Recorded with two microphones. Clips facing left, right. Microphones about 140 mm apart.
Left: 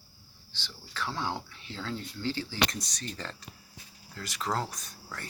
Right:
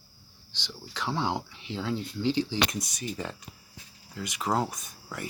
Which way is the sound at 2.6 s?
Centre (ahead or behind).